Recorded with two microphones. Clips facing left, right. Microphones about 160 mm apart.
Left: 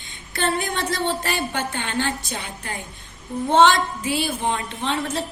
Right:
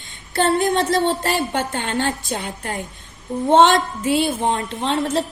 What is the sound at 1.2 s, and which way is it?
A woman's voice, 45° right (ahead or behind).